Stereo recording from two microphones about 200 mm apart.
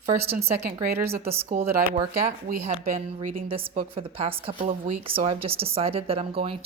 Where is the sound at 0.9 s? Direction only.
10° right (ahead or behind).